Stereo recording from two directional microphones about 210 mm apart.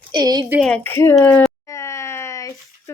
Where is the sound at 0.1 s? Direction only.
20° right (ahead or behind).